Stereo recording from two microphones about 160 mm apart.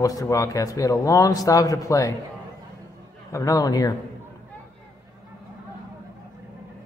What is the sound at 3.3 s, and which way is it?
Speech, 20° left (ahead or behind).